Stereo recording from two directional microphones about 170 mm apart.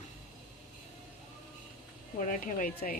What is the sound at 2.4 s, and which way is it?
Speech, 55° left (ahead or behind).